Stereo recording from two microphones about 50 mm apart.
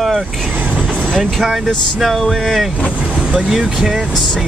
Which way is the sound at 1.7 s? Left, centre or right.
Centre.